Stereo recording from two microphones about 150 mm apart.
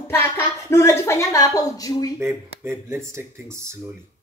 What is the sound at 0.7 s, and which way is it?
Speech, 15° left (ahead or behind).